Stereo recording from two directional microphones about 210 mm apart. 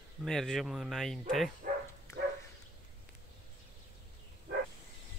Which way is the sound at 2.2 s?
50° right (ahead or behind).